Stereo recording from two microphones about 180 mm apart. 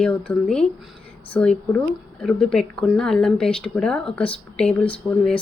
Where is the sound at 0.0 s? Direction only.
5° left (ahead or behind).